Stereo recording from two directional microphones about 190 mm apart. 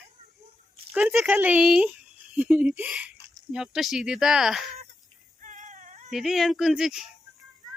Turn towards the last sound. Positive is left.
turn(degrees=0)  # may be behind; listen again after turning